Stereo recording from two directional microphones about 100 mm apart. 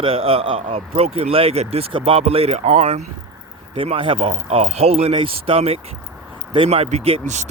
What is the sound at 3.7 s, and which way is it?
A man's voice, 65° right (ahead or behind).